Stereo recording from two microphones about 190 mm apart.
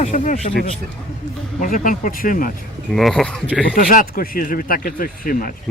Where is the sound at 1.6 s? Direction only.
45° left (ahead or behind).